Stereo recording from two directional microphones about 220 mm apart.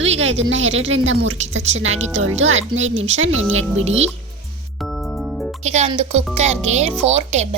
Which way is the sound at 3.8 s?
30° right (ahead or behind).